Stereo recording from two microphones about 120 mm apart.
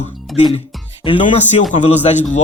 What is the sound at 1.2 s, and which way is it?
A man's voice, 80° left.